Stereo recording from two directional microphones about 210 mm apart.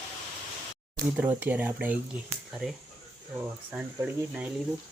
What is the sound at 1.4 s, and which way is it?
Speech, 10° right (ahead or behind).